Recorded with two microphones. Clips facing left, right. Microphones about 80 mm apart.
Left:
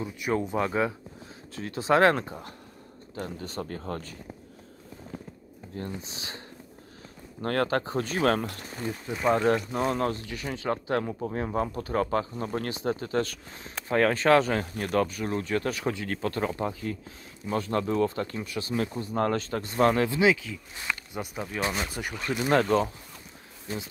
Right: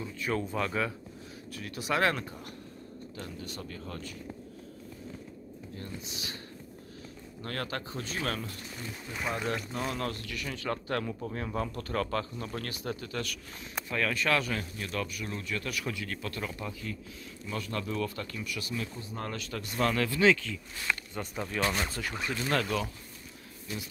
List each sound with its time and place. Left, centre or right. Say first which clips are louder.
0.0 s speech: left 4 dB; centre; by 4.2 s left
5.8 s speech: left 6 dB; left
7.4 s speech: left 10 dB; left
18.8 s speech: left 10 dB; left
22.6 s speech: left 8 dB; left